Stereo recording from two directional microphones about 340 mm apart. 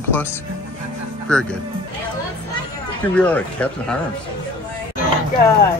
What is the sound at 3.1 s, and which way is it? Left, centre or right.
Speech, centre.